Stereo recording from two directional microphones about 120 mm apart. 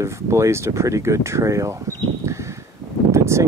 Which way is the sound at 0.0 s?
25° right (ahead or behind).